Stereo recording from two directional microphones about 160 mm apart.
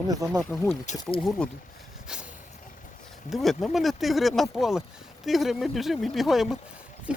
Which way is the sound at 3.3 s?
Centre (ahead or behind).